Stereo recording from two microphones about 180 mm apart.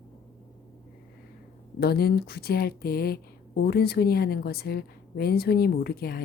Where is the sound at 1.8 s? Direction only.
60° left (ahead or behind).